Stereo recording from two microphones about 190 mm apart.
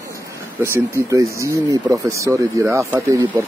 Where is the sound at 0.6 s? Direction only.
15° right (ahead or behind).